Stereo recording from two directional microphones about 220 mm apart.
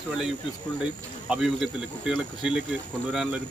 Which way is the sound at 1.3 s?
Centre (ahead or behind).